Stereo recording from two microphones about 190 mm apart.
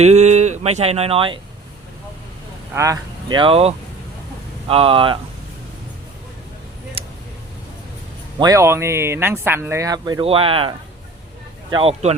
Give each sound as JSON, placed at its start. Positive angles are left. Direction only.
{"t": 0.0, "sound": "speech", "side_deg": -35}
{"t": 2.7, "sound": "speech", "side_deg": -15}
{"t": 7.0, "sound": "a sound", "side_deg": -30}
{"t": 8.4, "sound": "speech", "side_deg": -15}